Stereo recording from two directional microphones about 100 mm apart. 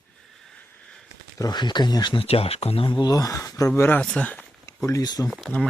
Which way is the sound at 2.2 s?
80° left.